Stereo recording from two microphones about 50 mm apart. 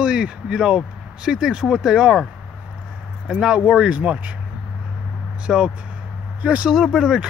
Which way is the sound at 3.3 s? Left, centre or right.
Centre.